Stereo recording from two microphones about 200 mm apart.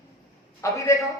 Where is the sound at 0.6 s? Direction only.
15° left (ahead or behind).